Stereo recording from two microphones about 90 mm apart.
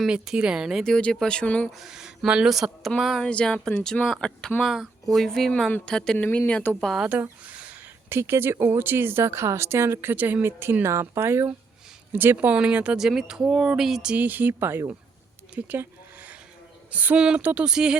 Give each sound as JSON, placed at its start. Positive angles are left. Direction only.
{"t": 0.0, "sound": "speech", "side_deg": -10}
{"t": 1.7, "sound": "speech", "side_deg": -5}
{"t": 3.2, "sound": "speech", "side_deg": 10}
{"t": 6.1, "sound": "speech", "side_deg": 20}
{"t": 6.8, "sound": "speech", "side_deg": 0}
{"t": 7.1, "sound": "a sound", "side_deg": -15}
{"t": 8.1, "sound": "speech", "side_deg": -25}
{"t": 15.5, "sound": "a sound", "side_deg": -20}
{"t": 16.9, "sound": "speech", "side_deg": -15}